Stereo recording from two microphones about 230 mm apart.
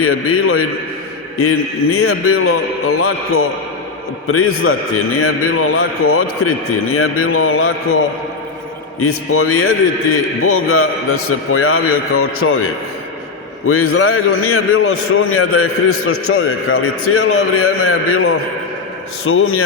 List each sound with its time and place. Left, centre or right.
0.0 s a man's voice: left
9.0 s a man's voice: left
13.7 s a man's voice: left